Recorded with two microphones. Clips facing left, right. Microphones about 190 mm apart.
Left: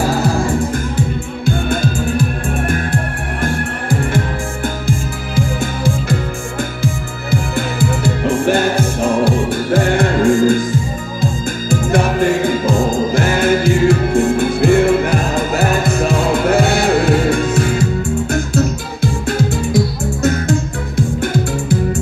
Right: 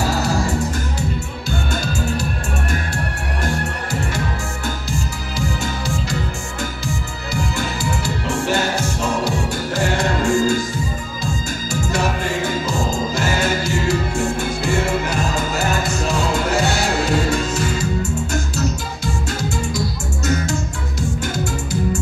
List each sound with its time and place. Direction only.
0.0 s music: 55° left (ahead or behind)
6.8 s music: 55° left (ahead or behind)
11.7 s music: 55° left (ahead or behind)
21.2 s music: 55° left (ahead or behind)